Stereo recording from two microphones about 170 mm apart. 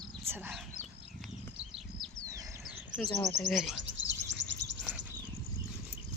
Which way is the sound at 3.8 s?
90° right.